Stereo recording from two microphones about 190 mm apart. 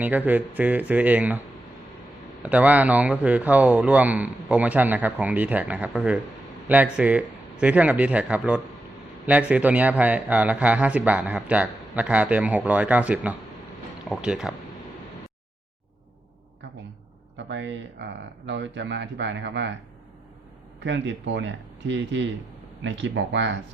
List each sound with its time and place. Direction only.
0.0 s a man's voice: 10° right (ahead or behind)
2.4 s a man's voice: 10° right (ahead or behind)
17.3 s speech: 70° right (ahead or behind)
20.8 s speech: 70° right (ahead or behind)